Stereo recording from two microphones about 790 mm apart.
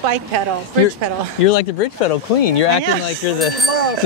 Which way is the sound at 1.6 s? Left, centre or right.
Left.